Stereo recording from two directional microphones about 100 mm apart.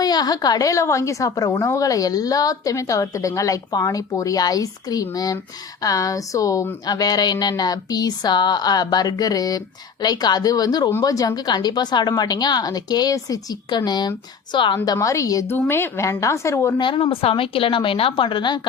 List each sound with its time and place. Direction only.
0.0 s a woman's voice: 40° left (ahead or behind)
14.9 s a woman's voice: 30° left (ahead or behind)
15.4 s a woman's voice: 20° left (ahead or behind)
16.7 s speech: 55° left (ahead or behind)